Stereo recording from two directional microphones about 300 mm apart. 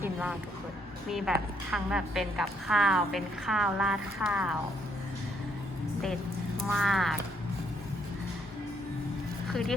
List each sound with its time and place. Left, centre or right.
0.0 s a sound: centre
1.1 s a woman's voice: centre
6.7 s a woman's voice: centre
9.5 s speech: centre